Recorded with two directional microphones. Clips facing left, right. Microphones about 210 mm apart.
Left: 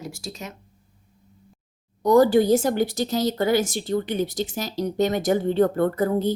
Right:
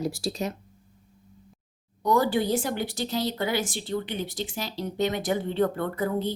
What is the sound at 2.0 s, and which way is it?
Speech, 40° left (ahead or behind).